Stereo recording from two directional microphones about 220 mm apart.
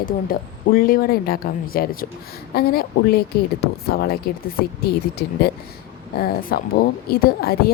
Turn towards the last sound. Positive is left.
turn(degrees=45)  # may be behind; listen again after turning